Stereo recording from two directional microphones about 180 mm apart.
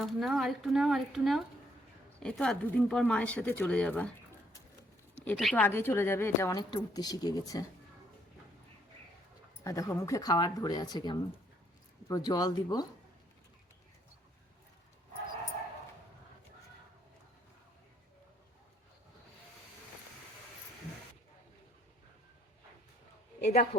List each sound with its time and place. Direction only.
0.0 s speech: centre (ahead or behind)
5.2 s speech: 5° left (ahead or behind)
9.6 s speech: 15° left (ahead or behind)
23.4 s a man's voice: 50° left (ahead or behind)